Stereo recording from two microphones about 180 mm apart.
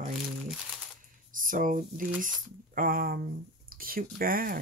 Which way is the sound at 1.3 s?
50° right (ahead or behind).